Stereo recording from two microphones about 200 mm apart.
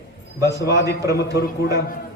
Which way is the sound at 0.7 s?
55° left (ahead or behind).